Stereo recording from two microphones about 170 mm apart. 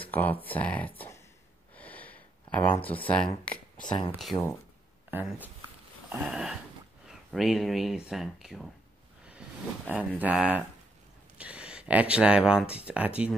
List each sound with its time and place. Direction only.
0.1 s speech: 10° left (ahead or behind)
1.8 s a sound: 10° left (ahead or behind)
2.8 s speech: 10° left (ahead or behind)
3.4 s a sound: 5° left (ahead or behind)
4.3 s speech: 30° left (ahead or behind)
5.1 s speech: 10° right (ahead or behind)
9.8 s speech: 10° right (ahead or behind)